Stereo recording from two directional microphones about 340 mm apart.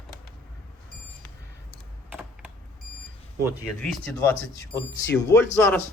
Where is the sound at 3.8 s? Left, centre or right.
Centre.